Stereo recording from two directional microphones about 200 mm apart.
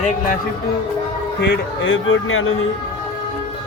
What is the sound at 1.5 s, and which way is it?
A man's voice, 70° left (ahead or behind).